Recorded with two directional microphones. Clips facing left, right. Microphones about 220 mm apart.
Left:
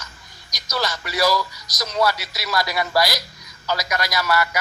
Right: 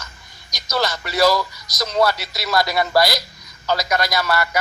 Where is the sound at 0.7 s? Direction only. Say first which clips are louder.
Right 3 dB; 55° right (ahead or behind).